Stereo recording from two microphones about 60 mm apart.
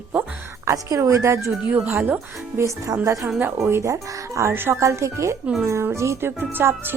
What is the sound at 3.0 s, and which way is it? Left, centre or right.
Speech, right.